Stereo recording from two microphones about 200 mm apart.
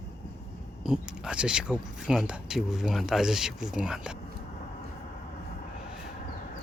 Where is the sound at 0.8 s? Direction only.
Centre (ahead or behind).